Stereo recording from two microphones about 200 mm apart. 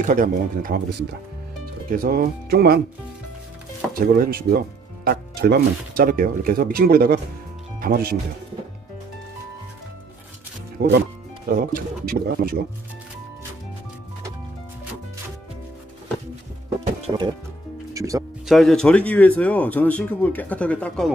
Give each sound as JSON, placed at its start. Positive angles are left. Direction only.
{"t": 0.0, "sound": "speech", "side_deg": -40}
{"t": 1.9, "sound": "speech", "side_deg": -45}
{"t": 4.0, "sound": "speech", "side_deg": -45}
{"t": 10.8, "sound": "speech", "side_deg": -50}
{"t": 17.9, "sound": "speech", "side_deg": -15}
{"t": 18.5, "sound": "speech", "side_deg": 0}